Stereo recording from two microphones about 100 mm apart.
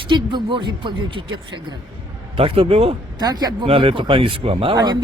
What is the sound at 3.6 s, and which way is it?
Speech, 65° right (ahead or behind).